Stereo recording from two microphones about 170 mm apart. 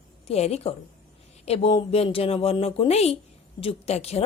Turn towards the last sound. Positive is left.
turn(degrees=40)  # may be behind; listen again after turning